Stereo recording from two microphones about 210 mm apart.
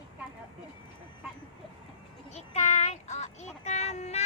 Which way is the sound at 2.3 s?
30° left (ahead or behind).